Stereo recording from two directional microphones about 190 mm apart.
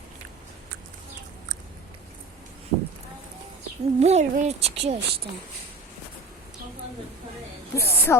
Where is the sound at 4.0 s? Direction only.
35° right (ahead or behind).